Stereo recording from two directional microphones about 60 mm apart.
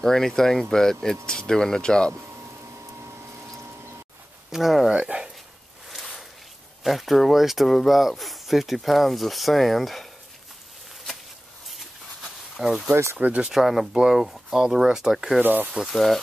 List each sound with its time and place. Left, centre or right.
0.0 s speech: centre
2.2 s vacuum cleaner: right
4.5 s speech: centre
4.9 s speech: centre
6.8 s speech: centre
11.7 s a sound: centre
12.9 s speech: right
13.2 s speech: right
13.5 s speech: centre
15.4 s speech: right
15.9 s speech: centre